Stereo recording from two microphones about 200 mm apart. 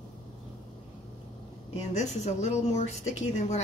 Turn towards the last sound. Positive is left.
turn(degrees=35)  # may be behind; listen again after turning